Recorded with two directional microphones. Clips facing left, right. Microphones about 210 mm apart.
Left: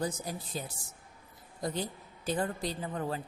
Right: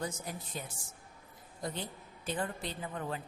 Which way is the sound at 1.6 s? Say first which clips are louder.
Left 5 dB; 40° left (ahead or behind).